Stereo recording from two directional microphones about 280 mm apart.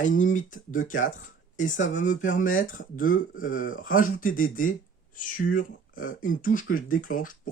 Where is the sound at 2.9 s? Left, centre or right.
Left.